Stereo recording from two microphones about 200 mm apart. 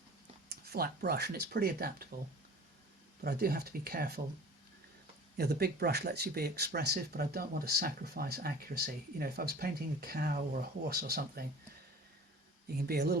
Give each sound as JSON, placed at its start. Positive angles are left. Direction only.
{"t": 0.4, "sound": "speech", "side_deg": -50}
{"t": 3.2, "sound": "speech", "side_deg": -50}
{"t": 5.4, "sound": "speech", "side_deg": -50}
{"t": 12.6, "sound": "speech", "side_deg": -50}